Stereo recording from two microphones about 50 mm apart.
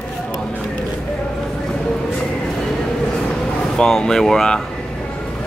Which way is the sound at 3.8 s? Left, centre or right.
Centre.